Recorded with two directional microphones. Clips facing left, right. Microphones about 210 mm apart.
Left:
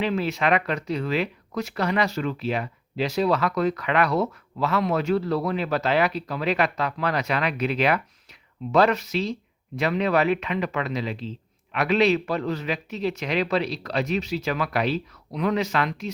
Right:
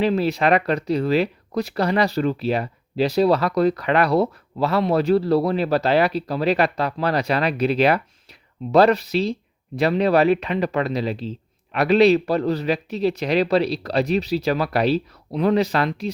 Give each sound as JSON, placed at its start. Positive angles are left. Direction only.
{"t": 0.0, "sound": "speech", "side_deg": -35}